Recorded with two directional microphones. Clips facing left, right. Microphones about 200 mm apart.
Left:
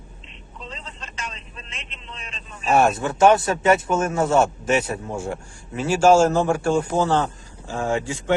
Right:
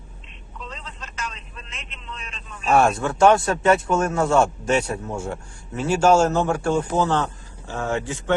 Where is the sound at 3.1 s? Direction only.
20° left (ahead or behind).